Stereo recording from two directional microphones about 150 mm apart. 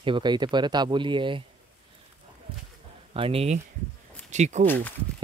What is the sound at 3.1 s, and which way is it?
Speech, 40° right (ahead or behind).